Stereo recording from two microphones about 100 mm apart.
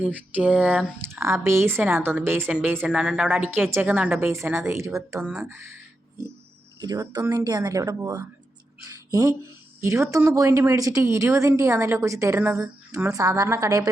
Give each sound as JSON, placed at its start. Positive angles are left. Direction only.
{"t": 0.0, "sound": "a woman's voice", "side_deg": -15}
{"t": 1.0, "sound": "a woman's voice", "side_deg": -25}
{"t": 2.9, "sound": "a woman's voice", "side_deg": -10}
{"t": 6.7, "sound": "a woman's voice", "side_deg": -40}